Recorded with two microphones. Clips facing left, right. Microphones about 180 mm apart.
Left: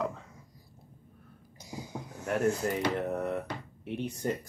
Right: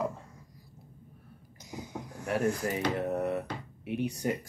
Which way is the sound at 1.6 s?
35° left (ahead or behind).